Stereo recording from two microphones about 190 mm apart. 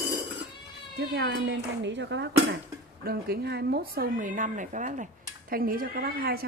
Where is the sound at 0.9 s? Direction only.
65° right (ahead or behind).